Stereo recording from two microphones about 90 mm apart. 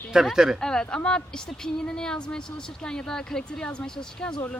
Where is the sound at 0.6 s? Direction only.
10° left (ahead or behind).